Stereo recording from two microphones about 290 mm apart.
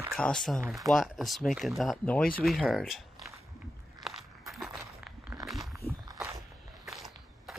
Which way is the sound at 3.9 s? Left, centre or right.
Centre.